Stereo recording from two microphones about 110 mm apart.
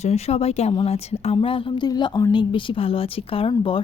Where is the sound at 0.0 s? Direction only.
70° left (ahead or behind).